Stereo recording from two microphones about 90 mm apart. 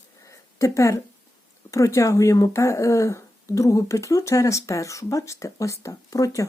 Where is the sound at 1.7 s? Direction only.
35° left (ahead or behind).